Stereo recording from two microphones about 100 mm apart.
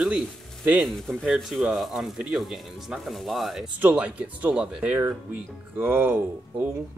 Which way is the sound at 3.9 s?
10° right (ahead or behind).